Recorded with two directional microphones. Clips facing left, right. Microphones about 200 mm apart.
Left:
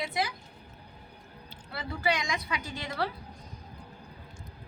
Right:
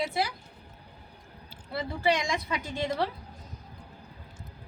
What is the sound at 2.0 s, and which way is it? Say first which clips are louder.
A woman's voice: right 3 dB; 30° right (ahead or behind).